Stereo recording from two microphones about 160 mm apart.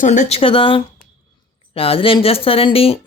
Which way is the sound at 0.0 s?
50° left (ahead or behind).